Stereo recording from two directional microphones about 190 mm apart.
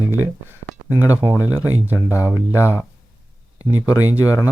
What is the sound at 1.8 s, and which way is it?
Speech, 10° right (ahead or behind).